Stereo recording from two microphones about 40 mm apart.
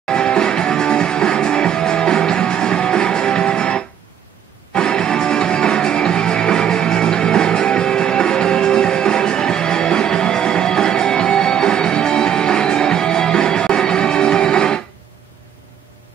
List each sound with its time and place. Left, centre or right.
0.1 s music: centre